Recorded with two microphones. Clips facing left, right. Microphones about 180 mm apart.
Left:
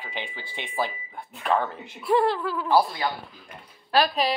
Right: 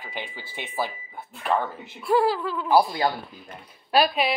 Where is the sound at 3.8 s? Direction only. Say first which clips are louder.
Right 1 dB; 10° right (ahead or behind).